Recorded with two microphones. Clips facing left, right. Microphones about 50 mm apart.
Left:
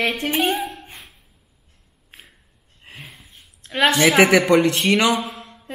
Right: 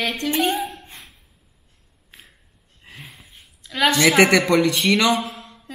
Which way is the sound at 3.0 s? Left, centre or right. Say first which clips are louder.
Left 1 dB; centre.